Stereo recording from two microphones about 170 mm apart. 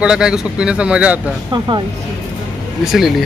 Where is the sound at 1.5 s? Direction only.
25° right (ahead or behind).